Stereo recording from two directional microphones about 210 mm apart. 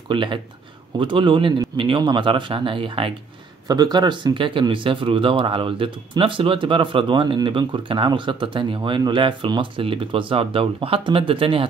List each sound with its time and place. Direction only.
0.1 s speech: 25° right (ahead or behind)